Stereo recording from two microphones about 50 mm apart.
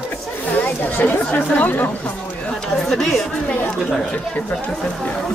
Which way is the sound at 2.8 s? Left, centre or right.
Centre.